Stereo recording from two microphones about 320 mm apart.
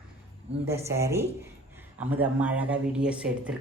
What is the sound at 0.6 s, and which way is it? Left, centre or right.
Speech, centre.